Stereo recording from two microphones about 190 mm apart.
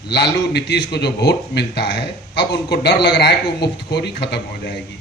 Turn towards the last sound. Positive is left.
turn(degrees=60)  # may be behind; listen again after turning